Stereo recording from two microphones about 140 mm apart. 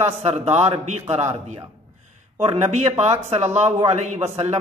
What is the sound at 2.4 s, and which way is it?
Speech, 50° right (ahead or behind).